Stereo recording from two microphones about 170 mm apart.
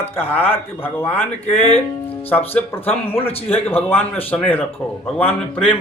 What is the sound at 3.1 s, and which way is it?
Speech, 35° left (ahead or behind).